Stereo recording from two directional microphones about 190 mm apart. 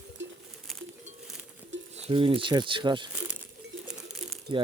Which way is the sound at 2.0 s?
30° right (ahead or behind).